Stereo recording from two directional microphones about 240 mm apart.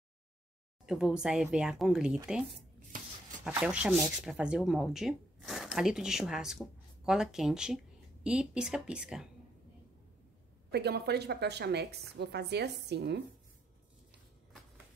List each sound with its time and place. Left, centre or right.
0.8 s speech: centre
10.7 s a woman's voice: right